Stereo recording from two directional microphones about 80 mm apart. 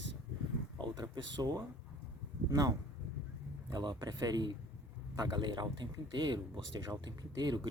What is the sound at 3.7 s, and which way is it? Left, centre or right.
Speech, right.